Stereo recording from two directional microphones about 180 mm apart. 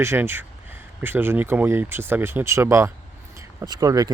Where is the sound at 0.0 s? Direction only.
10° right (ahead or behind).